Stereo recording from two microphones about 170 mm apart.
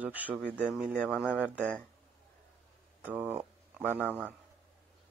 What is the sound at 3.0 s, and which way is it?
Speech, 10° right (ahead or behind).